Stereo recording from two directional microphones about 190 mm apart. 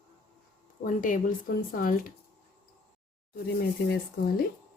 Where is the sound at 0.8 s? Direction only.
45° left (ahead or behind).